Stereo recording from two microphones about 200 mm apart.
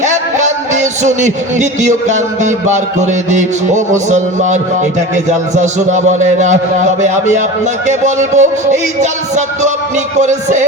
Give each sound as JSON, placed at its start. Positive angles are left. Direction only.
{"t": 0.0, "sound": "music", "side_deg": -35}
{"t": 5.1, "sound": "a man's voice", "side_deg": -35}